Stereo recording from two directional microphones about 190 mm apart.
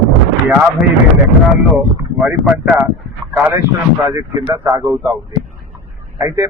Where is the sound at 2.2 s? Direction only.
5° right (ahead or behind).